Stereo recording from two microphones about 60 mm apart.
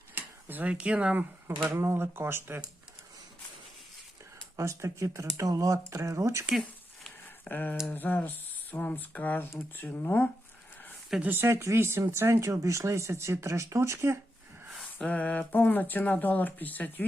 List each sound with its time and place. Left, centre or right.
0.1 s a sound: right
0.7 s speech: centre
1.7 s speech: right
4.5 s speech: right
6.5 s a sound: centre
7.4 s speech: left
11.2 s speech: right
15.0 s speech: left